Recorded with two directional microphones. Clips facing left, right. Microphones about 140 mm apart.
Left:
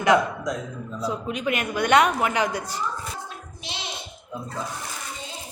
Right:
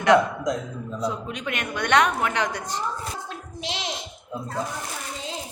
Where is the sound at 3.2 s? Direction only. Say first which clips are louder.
Right 5 dB; 90° right.